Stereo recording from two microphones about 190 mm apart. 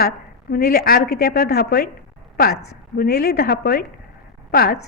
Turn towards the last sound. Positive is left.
turn(degrees=55)  # may be behind; listen again after turning